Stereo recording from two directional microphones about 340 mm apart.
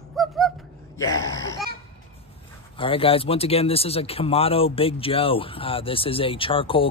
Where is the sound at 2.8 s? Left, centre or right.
Centre.